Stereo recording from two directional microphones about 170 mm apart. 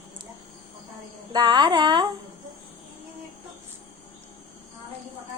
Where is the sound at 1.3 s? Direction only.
25° right (ahead or behind).